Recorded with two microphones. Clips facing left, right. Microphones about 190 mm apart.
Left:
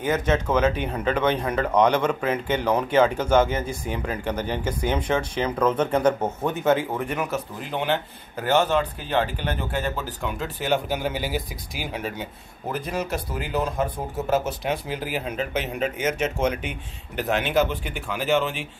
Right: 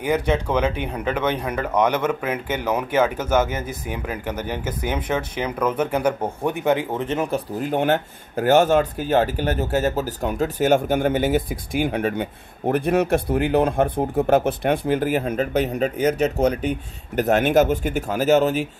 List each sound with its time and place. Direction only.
0.0 s speech: 15° right (ahead or behind); by 7.4 s 30° right (ahead or behind)
7.6 s speech: 45° right (ahead or behind)